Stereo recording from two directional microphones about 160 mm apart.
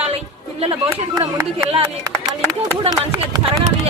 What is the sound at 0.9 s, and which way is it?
Speech, 15° right (ahead or behind).